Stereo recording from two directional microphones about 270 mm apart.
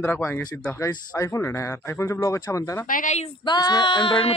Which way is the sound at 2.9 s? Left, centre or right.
Left.